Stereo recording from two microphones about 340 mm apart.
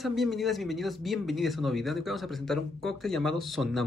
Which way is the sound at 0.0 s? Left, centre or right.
Centre.